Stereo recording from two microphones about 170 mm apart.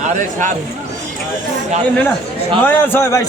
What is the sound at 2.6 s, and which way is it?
Speech, 10° left (ahead or behind).